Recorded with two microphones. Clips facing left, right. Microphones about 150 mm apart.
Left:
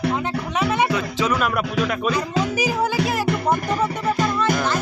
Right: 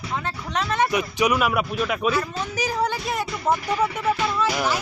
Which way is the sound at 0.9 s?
15° right (ahead or behind).